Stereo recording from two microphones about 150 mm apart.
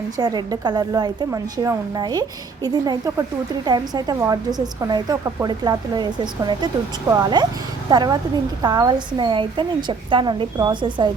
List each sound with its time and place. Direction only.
0.2 s a woman's voice: 25° right (ahead or behind)